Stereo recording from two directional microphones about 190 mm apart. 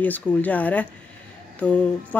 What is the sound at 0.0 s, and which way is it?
Speech, 10° left (ahead or behind).